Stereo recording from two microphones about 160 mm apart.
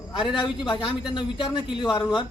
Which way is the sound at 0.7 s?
30° left (ahead or behind).